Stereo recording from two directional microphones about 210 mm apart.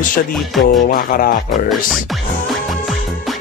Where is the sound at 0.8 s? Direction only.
45° left (ahead or behind).